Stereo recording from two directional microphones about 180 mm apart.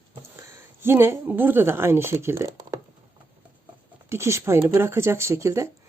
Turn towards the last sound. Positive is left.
turn(degrees=-15)  # may be behind; listen again after turning